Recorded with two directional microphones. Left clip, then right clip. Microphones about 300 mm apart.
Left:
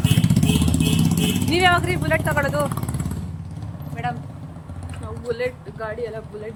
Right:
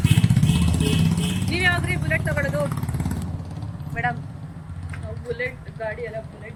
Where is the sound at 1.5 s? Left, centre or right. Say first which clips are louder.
Left 4 dB; centre.